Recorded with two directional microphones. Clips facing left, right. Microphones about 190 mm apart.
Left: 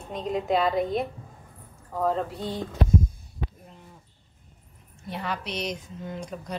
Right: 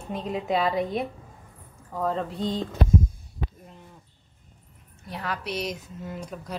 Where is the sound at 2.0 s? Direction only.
5° left (ahead or behind).